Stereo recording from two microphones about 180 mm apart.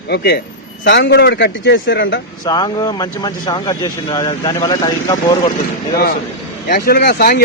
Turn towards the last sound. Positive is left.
turn(degrees=60)  # may be behind; listen again after turning